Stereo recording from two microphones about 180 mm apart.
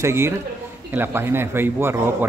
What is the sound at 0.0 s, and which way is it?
Speech, 15° right (ahead or behind).